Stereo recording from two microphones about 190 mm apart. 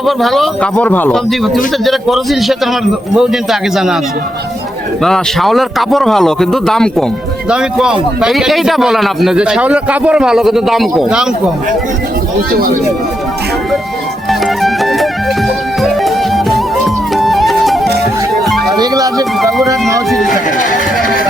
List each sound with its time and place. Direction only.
0.0 s a man's voice: centre (ahead or behind)
5.0 s a man's voice: centre (ahead or behind)
12.5 s speech: 50° right (ahead or behind)
14.3 s music: centre (ahead or behind)
18.8 s music: 20° right (ahead or behind)
20.1 s a man's voice: centre (ahead or behind)